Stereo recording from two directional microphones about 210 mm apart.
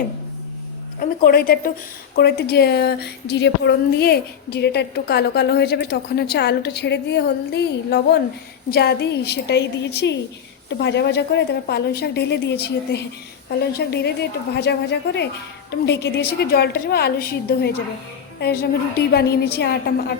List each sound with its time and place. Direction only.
0.9 s a woman's voice: 45° left (ahead or behind)